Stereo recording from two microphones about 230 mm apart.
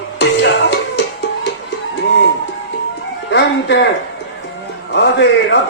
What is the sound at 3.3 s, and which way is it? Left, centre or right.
Speech, left.